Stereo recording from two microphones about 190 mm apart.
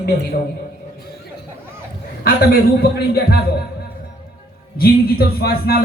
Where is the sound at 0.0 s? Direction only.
55° left (ahead or behind).